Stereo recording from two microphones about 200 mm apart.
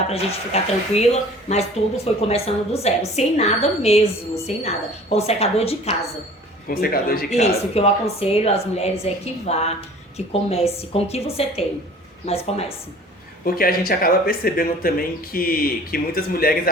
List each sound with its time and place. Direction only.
0.1 s a woman's voice: 30° left (ahead or behind)
6.7 s speech: 45° left (ahead or behind)
7.3 s a woman's voice: 35° left (ahead or behind)
13.4 s speech: 45° left (ahead or behind)